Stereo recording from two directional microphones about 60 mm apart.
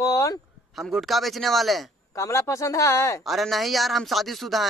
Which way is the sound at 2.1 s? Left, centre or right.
Left.